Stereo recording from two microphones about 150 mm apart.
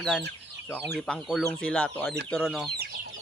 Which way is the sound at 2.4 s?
5° right (ahead or behind).